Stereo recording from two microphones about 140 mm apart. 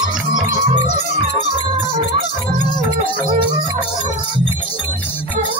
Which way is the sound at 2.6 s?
30° left (ahead or behind).